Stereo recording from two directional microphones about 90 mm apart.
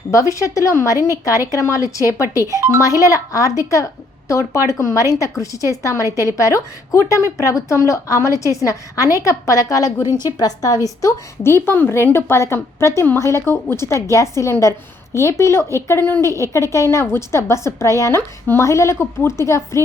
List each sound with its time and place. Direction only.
0.1 s a woman's voice: 35° left (ahead or behind)
2.5 s speech: 30° right (ahead or behind)
2.8 s a woman's voice: 40° left (ahead or behind)
11.4 s a woman's voice: 25° left (ahead or behind)